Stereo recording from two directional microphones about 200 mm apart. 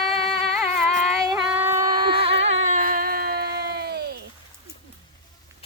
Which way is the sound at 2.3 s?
70° right (ahead or behind).